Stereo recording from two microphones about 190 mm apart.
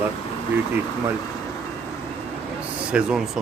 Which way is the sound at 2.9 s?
5° right (ahead or behind).